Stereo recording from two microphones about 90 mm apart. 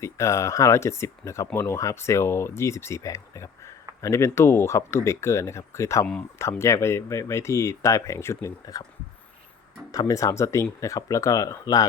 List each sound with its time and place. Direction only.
0.0 s speech: 35° left (ahead or behind)
8.7 s speech: 45° left (ahead or behind)
9.9 s speech: 40° left (ahead or behind)